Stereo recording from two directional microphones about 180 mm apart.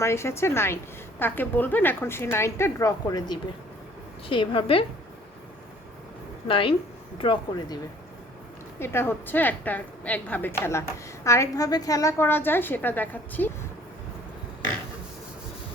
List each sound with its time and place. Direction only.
0.0 s a woman's voice: 15° left (ahead or behind); by 4.9 s 30° left (ahead or behind)
6.5 s a woman's voice: 30° left (ahead or behind)
8.8 s a woman's voice: 15° left (ahead or behind)